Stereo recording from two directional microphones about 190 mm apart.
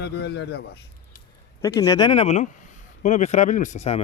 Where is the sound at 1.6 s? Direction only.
20° left (ahead or behind).